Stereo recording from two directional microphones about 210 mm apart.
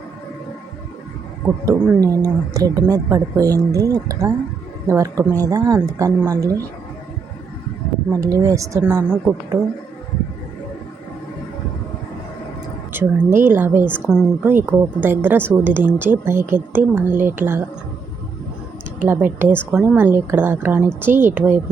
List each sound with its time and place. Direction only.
1.5 s a woman's voice: 15° right (ahead or behind)
8.1 s a woman's voice: 15° right (ahead or behind)
13.4 s a woman's voice: 10° right (ahead or behind)
19.0 s a woman's voice: 10° right (ahead or behind)